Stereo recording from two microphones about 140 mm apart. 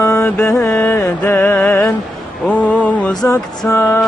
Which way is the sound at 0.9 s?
15° left (ahead or behind).